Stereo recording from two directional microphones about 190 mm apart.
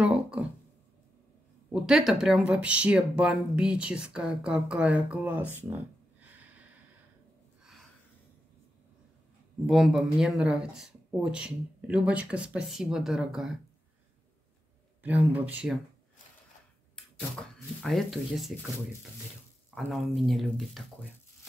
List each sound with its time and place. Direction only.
0.0 s a sound: 5° right (ahead or behind)
1.7 s speech: centre (ahead or behind)
9.7 s speech: centre (ahead or behind)
15.0 s speech: 10° right (ahead or behind)
16.9 s speech: 5° left (ahead or behind)
19.7 s speech: centre (ahead or behind)